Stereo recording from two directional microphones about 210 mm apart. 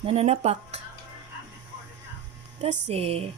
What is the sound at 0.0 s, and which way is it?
Speech, 30° right (ahead or behind).